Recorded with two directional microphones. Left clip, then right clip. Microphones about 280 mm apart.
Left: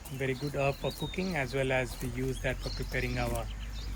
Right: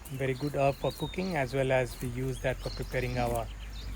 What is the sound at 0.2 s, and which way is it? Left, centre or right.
Speech, right.